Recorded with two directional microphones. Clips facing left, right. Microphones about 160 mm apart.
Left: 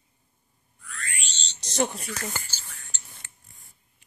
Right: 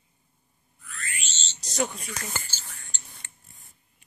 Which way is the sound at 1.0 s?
Centre (ahead or behind).